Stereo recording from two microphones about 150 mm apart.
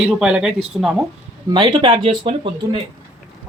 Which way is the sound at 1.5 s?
35° right (ahead or behind).